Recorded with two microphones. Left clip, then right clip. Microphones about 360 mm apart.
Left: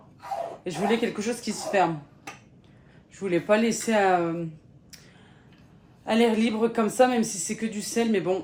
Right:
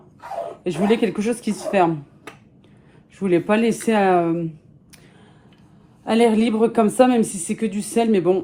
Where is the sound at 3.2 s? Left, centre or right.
Right.